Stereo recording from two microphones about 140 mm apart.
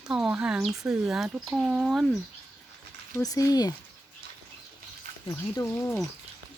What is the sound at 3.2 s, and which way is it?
Speech, 25° left (ahead or behind).